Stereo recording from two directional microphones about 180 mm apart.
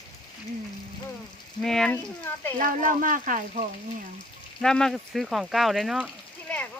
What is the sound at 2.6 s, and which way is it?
Speech, 50° right (ahead or behind).